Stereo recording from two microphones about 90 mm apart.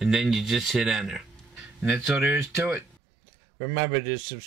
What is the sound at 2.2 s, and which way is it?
Speech, 25° right (ahead or behind).